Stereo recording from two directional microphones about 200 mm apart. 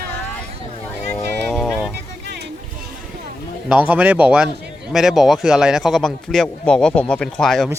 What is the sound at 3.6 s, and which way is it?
Speech, 10° right (ahead or behind).